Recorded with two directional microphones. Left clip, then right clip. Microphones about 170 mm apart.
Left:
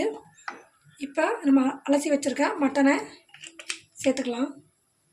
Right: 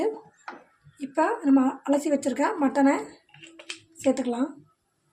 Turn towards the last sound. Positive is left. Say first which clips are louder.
# right 1 dB
turn(degrees=-15)  # may be behind; listen again after turning